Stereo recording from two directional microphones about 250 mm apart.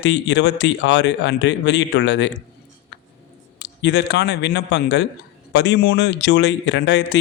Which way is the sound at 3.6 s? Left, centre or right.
Left.